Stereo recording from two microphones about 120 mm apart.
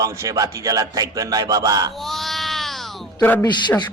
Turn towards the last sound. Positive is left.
turn(degrees=40)  # may be behind; listen again after turning